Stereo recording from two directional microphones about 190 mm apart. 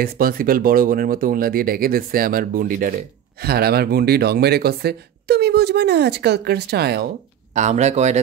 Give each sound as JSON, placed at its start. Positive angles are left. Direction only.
{"t": 0.0, "sound": "speech", "side_deg": -50}
{"t": 7.5, "sound": "speech", "side_deg": -40}